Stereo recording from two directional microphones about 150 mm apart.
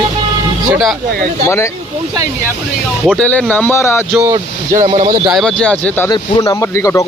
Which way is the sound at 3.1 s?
10° left (ahead or behind).